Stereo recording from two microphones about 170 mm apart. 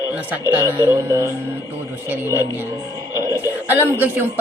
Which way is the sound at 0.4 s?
15° right (ahead or behind).